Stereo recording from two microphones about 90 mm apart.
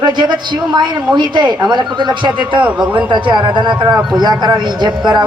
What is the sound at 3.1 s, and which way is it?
Speech, 60° right (ahead or behind).